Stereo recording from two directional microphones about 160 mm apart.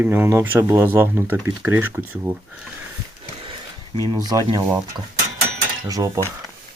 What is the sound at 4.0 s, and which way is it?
Speech, 25° right (ahead or behind).